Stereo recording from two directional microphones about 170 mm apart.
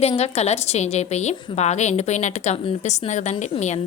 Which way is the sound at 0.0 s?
40° left (ahead or behind).